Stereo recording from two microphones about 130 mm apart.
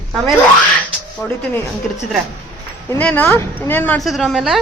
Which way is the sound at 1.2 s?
20° left (ahead or behind).